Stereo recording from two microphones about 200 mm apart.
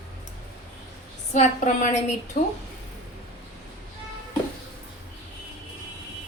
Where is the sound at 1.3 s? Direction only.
35° left (ahead or behind).